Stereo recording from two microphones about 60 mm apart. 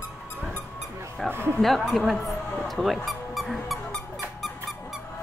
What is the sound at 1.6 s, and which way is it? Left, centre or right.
Speech, centre.